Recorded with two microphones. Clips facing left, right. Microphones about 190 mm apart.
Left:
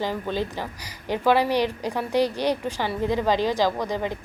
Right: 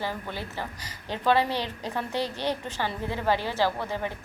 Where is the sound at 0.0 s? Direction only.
15° left (ahead or behind).